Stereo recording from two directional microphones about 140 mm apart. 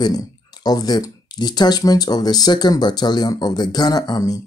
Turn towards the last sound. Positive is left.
turn(degrees=25)  # may be behind; listen again after turning